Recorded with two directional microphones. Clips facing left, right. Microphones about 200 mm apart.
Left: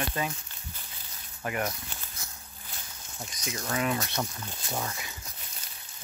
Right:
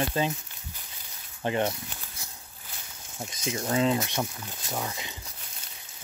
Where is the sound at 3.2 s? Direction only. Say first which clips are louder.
Right 5 dB; 25° right (ahead or behind).